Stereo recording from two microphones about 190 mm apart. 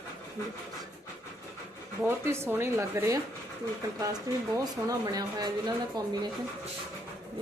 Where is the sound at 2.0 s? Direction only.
10° right (ahead or behind).